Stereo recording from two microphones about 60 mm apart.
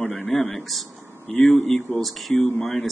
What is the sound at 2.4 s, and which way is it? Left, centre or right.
Speech, left.